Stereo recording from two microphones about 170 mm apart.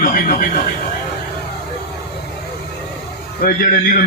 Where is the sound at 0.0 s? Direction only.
55° left (ahead or behind).